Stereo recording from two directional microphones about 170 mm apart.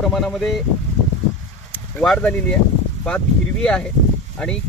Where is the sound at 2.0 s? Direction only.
5° left (ahead or behind).